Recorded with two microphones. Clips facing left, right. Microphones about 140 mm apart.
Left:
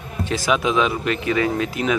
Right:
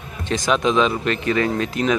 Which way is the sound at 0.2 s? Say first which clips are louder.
Right 1 dB; 5° left (ahead or behind).